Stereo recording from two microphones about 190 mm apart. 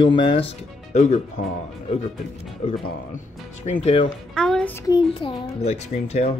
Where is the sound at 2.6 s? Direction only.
35° left (ahead or behind).